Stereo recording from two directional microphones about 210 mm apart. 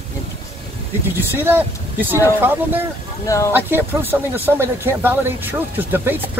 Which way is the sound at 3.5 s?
10° right (ahead or behind).